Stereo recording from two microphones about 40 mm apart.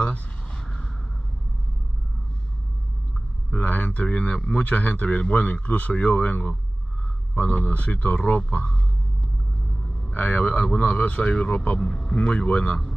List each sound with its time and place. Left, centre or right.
0.5 s a sound: left
3.5 s speech: left
10.1 s speech: left
10.6 s speech: left
10.9 s speech: left
11.8 s speech: centre
12.2 s speech: left